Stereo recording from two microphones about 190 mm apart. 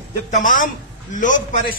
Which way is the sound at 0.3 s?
45° left (ahead or behind).